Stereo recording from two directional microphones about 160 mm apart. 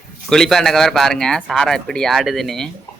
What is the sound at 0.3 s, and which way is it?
Speech, 5° left (ahead or behind).